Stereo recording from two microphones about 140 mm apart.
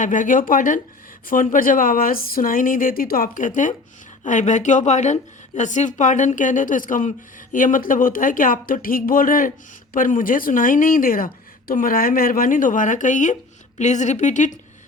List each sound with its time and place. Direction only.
0.0 s a woman's voice: 65° left (ahead or behind)